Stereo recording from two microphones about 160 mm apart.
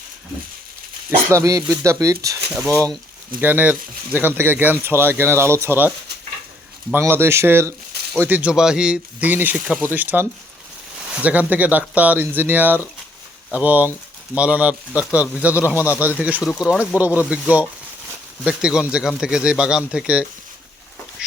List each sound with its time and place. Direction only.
1.3 s speech: 20° right (ahead or behind)
3.4 s speech: 10° right (ahead or behind)
6.9 s speech: 15° right (ahead or behind)
18.4 s speech: 5° right (ahead or behind)
21.2 s a sound: 5° right (ahead or behind)